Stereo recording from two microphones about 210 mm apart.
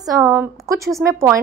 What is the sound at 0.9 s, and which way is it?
Speech, centre (ahead or behind).